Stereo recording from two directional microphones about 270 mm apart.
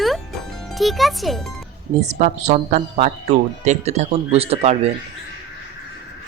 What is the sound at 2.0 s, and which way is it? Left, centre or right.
Speech, right.